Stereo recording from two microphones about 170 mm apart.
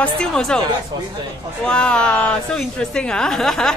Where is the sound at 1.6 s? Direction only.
5° left (ahead or behind).